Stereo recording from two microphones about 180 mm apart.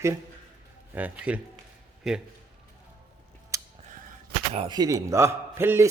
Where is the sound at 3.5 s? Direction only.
20° right (ahead or behind).